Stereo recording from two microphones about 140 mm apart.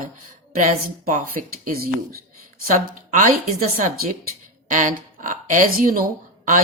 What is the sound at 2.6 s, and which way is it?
Speech, 70° right (ahead or behind).